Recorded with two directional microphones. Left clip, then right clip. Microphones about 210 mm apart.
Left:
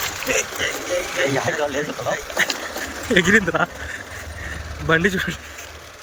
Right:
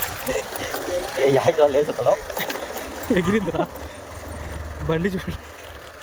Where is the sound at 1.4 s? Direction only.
60° right (ahead or behind).